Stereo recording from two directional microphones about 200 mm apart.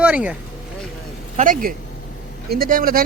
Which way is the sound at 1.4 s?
40° right (ahead or behind).